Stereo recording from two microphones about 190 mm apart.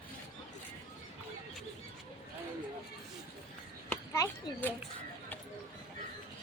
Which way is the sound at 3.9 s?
10° left (ahead or behind).